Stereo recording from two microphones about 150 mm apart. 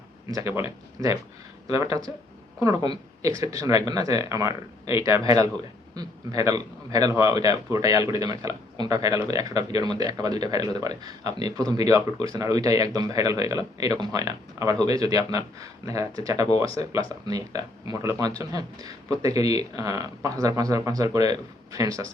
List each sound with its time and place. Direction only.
0.3 s a man's voice: 20° right (ahead or behind)